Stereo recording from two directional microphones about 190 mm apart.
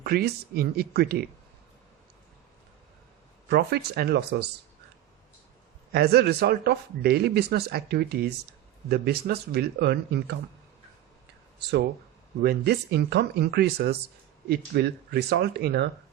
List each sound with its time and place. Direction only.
0.0 s speech: 55° right (ahead or behind)
3.5 s speech: 60° right (ahead or behind)
5.9 s speech: 55° right (ahead or behind)
12.4 s speech: 60° right (ahead or behind)